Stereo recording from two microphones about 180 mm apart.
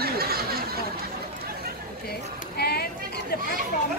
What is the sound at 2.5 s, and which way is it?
Speech, 60° left (ahead or behind).